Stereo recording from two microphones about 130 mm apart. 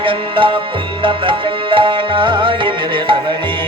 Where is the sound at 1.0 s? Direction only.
40° right (ahead or behind).